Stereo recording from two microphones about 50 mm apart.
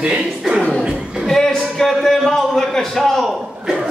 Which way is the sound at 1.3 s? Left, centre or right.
Centre.